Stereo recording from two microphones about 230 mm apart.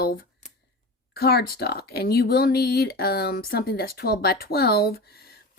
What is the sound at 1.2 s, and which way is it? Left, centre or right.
Speech, left.